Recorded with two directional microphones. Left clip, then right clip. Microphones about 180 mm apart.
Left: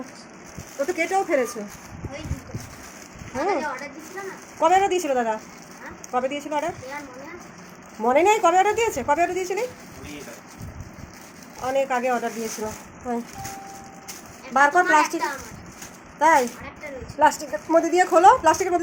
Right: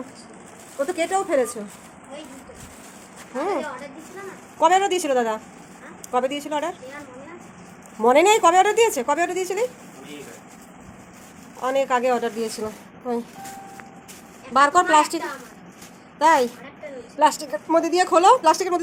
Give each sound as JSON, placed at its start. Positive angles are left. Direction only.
{"t": 0.8, "sound": "a woman's voice", "side_deg": -5}
{"t": 3.3, "sound": "a woman's voice", "side_deg": -5}
{"t": 4.6, "sound": "a woman's voice", "side_deg": -10}
{"t": 8.0, "sound": "a woman's voice", "side_deg": -20}
{"t": 11.6, "sound": "a woman's voice", "side_deg": -10}
{"t": 14.5, "sound": "a woman's voice", "side_deg": -10}
{"t": 16.1, "sound": "speech", "side_deg": -10}
{"t": 17.4, "sound": "a woman's voice", "side_deg": -5}